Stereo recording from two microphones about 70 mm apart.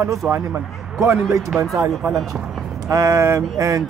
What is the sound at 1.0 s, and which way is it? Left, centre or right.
Speech, right.